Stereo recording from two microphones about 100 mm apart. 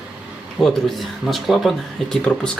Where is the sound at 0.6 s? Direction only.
5° left (ahead or behind).